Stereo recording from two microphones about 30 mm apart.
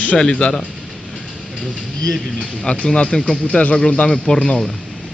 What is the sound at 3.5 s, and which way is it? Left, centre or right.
Speech, left.